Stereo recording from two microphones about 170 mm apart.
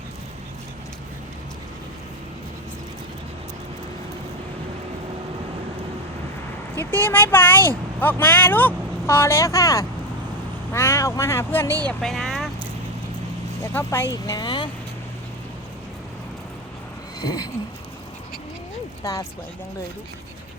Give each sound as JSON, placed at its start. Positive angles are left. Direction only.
{"t": 6.7, "sound": "speech", "side_deg": 10}
{"t": 11.9, "sound": "speech", "side_deg": 0}
{"t": 13.6, "sound": "speech", "side_deg": 15}
{"t": 17.2, "sound": "speech", "side_deg": 20}